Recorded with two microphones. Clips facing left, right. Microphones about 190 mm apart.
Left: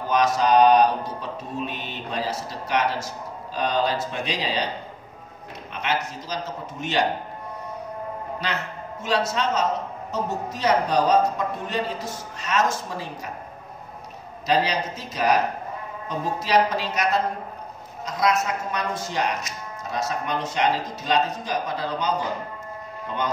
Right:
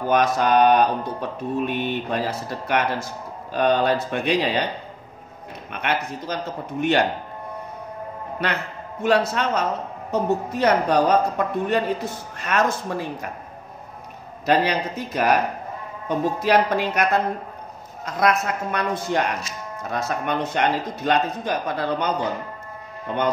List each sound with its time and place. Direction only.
0.1 s speech: 55° right (ahead or behind)
5.7 s speech: 60° right (ahead or behind)
8.4 s speech: 55° right (ahead or behind)
14.4 s speech: 55° right (ahead or behind)